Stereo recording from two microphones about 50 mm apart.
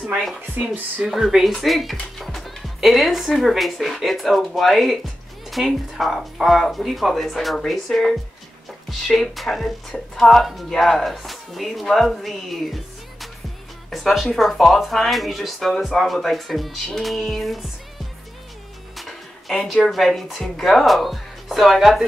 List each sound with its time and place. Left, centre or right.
0.6 s speech: right
1.0 s speech: centre
18.9 s music: centre
19.6 s speech: centre